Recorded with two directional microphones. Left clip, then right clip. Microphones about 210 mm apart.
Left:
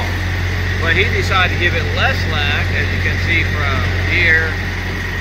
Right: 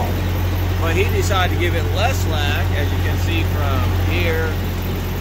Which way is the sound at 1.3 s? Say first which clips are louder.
Left 5 dB; 20° right (ahead or behind).